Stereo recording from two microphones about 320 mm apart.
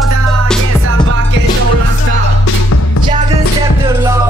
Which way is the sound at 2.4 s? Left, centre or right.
Left.